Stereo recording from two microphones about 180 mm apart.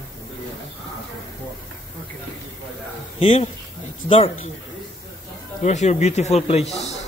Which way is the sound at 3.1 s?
30° left (ahead or behind).